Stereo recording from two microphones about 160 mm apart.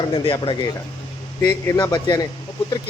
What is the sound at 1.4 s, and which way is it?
Speech, 20° left (ahead or behind).